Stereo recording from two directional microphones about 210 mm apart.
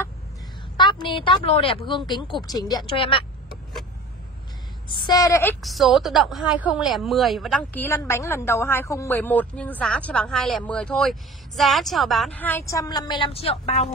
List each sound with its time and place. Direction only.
0.7 s speech: 20° left (ahead or behind)
4.8 s a woman's voice: 20° left (ahead or behind)
5.6 s a woman's voice: centre (ahead or behind); by 13.8 s 30° left (ahead or behind)